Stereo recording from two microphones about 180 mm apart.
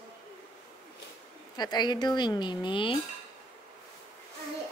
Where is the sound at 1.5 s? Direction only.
25° left (ahead or behind).